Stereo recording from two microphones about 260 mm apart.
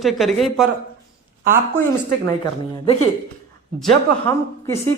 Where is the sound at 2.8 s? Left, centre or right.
Left.